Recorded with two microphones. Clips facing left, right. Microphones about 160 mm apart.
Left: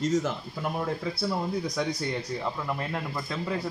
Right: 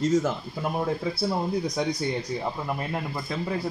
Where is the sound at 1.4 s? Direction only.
20° right (ahead or behind).